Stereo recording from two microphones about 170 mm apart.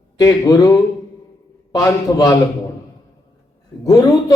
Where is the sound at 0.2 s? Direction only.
20° left (ahead or behind).